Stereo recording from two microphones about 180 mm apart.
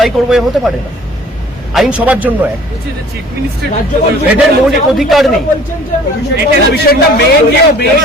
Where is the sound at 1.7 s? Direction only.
5° right (ahead or behind).